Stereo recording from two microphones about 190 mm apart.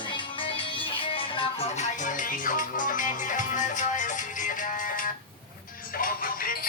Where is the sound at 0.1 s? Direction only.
30° left (ahead or behind).